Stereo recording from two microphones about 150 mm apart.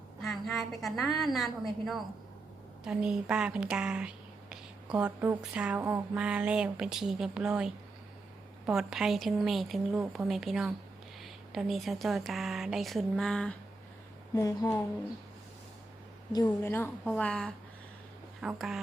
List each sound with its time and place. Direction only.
0.2 s a woman's voice: centre (ahead or behind)
14.3 s a woman's voice: 25° left (ahead or behind)
16.5 s a woman's voice: 15° left (ahead or behind); by 18.8 s centre (ahead or behind)